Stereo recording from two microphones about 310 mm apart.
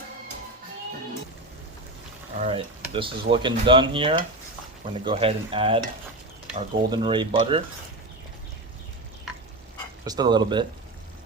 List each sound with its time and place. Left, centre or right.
2.4 s speech: centre
10.1 s speech: centre